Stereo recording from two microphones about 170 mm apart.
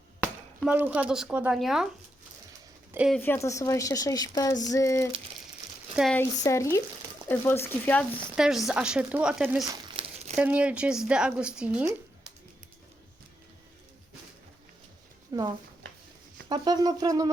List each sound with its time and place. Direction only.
0.2 s speech: 10° right (ahead or behind)
3.1 s a woman's voice: 10° left (ahead or behind)
6.1 s a woman's voice: 15° left (ahead or behind)
8.4 s speech: 5° right (ahead or behind)
9.9 s crumpling: 35° right (ahead or behind)
10.3 s speech: 5° right (ahead or behind)
15.3 s speech: 20° right (ahead or behind)
16.5 s speech: 25° right (ahead or behind)